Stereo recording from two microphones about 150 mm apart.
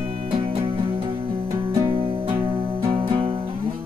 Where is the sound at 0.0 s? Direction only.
50° right (ahead or behind).